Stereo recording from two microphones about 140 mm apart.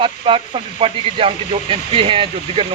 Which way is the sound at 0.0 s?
40° right (ahead or behind).